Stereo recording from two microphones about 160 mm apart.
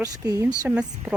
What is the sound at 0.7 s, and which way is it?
Speech, 10° right (ahead or behind).